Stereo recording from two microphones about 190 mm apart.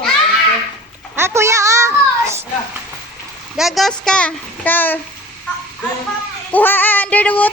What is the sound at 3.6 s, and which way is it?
A child's voice, centre (ahead or behind).